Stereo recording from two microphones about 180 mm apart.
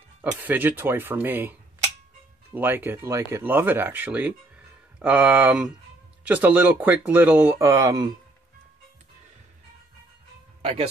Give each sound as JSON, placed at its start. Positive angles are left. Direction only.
{"t": 0.2, "sound": "speech", "side_deg": -10}
{"t": 10.6, "sound": "speech", "side_deg": -35}